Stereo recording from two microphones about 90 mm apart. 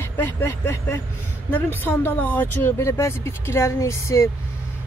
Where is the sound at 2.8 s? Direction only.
30° left (ahead or behind).